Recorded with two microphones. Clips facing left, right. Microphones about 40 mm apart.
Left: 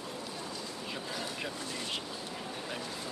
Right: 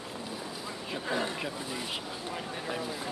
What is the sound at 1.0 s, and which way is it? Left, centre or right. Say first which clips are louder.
Speech: right 11 dB; right.